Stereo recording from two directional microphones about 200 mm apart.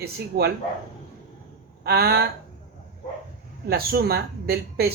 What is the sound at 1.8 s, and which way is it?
Speech, 50° right (ahead or behind).